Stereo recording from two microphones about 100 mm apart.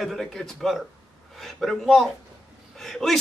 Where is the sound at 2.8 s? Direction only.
Centre (ahead or behind).